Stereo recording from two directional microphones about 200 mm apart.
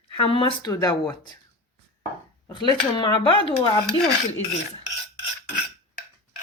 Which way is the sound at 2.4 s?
25° left (ahead or behind).